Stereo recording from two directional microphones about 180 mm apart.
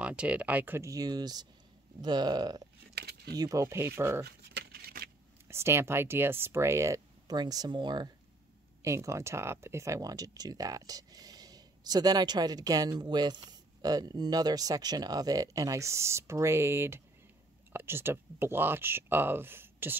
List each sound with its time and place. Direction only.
0.0 s speech: 5° right (ahead or behind); by 2.6 s 25° right (ahead or behind)
2.9 s keys jangling: 65° right (ahead or behind)
3.3 s speech: 20° right (ahead or behind)
4.6 s a sound: 60° right (ahead or behind)
5.5 s speech: 15° right (ahead or behind)